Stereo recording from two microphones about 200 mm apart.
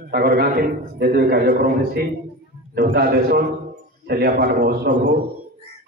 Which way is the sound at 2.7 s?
50° right (ahead or behind).